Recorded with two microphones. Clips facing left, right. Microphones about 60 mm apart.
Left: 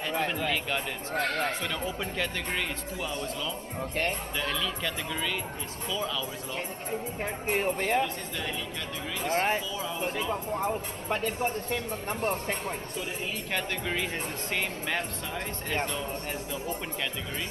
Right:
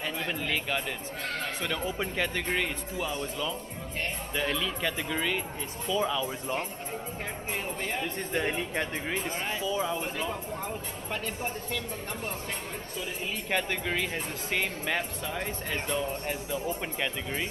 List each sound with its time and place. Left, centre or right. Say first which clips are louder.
0.4 s speech: left 1 dB; centre
1.1 s speech: left 9 dB; left
1.6 s speech: right 1 dB; centre; by 6.6 s right
7.4 s speech: left 7 dB; left
8.4 s speech: right 7 dB; right
9.3 s speech: left 7 dB; left
9.7 s speech: right 5 dB; right
9.9 s speech: left 2 dB; centre
11.1 s speech: left 5 dB; centre
13.5 s speech: right 3 dB; centre